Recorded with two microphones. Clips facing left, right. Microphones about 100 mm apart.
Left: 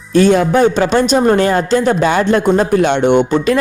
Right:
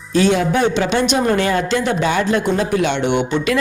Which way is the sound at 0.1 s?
50° left (ahead or behind).